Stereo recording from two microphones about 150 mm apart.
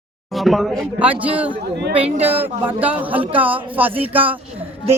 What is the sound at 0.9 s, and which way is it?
Speech, 10° right (ahead or behind).